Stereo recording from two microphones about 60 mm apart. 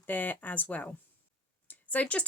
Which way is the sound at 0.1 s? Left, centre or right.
Left.